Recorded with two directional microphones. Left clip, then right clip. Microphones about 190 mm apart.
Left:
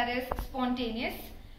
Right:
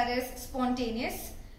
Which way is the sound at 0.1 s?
10° right (ahead or behind).